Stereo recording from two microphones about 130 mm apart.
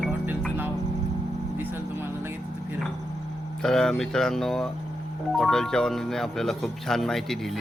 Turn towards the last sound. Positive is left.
turn(degrees=0)  # may be behind; listen again after turning